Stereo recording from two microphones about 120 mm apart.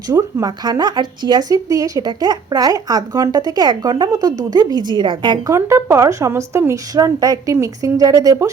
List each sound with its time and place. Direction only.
0.1 s speech: 30° right (ahead or behind)
5.5 s a woman's voice: 25° right (ahead or behind)